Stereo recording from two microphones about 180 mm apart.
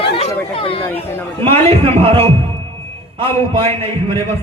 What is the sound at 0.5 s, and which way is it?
Chatter, 30° left (ahead or behind).